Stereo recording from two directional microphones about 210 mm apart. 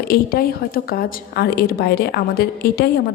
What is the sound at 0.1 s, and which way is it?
A woman's voice, 45° left (ahead or behind).